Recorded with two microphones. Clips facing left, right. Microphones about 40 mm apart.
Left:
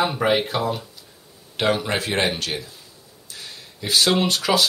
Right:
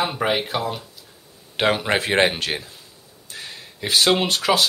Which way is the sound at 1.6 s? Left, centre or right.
Right.